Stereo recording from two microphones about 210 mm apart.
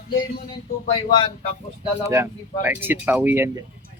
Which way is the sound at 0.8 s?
25° left (ahead or behind).